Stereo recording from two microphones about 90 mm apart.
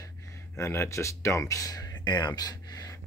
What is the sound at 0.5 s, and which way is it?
Speech, 30° left (ahead or behind).